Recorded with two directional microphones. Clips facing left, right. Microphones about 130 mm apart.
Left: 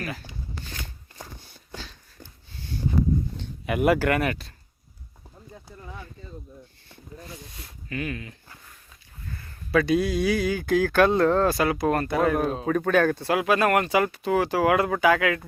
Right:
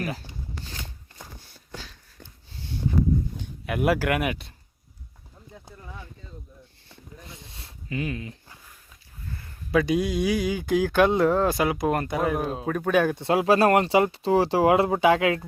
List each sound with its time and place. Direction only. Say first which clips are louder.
1.4 s a sound: left 1 dB; 5° right (ahead or behind)
3.7 s speech: left 2 dB; centre (ahead or behind)
7.2 s speech: left 5 dB; 25° right (ahead or behind)
9.7 s speech: left 1 dB; 15° right (ahead or behind)
12.2 s speech: left 3 dB; 5° right (ahead or behind)
13.2 s speech: right 3 dB; 30° right (ahead or behind)